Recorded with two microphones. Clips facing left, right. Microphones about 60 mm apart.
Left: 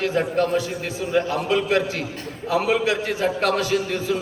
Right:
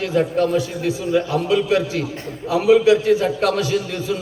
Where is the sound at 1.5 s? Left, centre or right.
Left.